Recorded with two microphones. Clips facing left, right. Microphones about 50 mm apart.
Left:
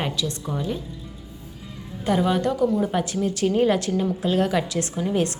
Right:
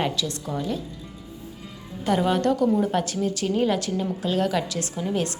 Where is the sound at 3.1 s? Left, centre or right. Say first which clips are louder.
Left 3 dB; left.